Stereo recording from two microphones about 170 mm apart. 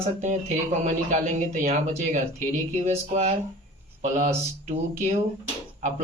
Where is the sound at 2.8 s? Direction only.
40° right (ahead or behind).